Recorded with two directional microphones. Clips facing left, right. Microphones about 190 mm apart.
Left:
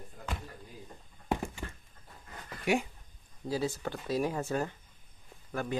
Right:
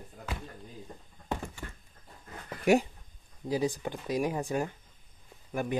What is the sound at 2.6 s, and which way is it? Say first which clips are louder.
Speech: right 6 dB; 40° right (ahead or behind).